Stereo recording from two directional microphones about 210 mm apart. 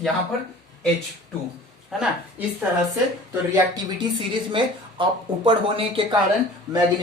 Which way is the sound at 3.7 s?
25° right (ahead or behind).